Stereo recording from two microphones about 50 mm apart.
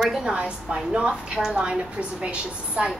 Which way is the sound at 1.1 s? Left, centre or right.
Centre.